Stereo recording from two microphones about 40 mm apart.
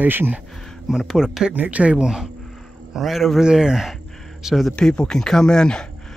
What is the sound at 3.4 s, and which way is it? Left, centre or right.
Speech, centre.